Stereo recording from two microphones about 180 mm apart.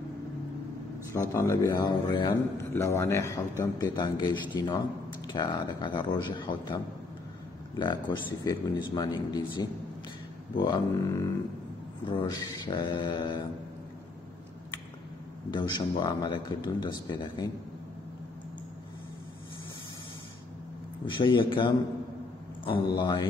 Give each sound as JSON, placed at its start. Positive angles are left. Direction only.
{"t": 1.1, "sound": "a man's voice", "side_deg": 15}
{"t": 15.5, "sound": "a man's voice", "side_deg": 25}
{"t": 21.0, "sound": "a man's voice", "side_deg": 25}